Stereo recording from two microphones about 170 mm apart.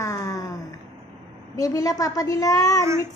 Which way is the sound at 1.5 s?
20° left (ahead or behind).